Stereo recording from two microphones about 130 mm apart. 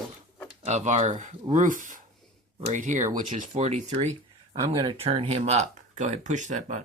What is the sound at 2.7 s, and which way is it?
Speech, 75° right (ahead or behind).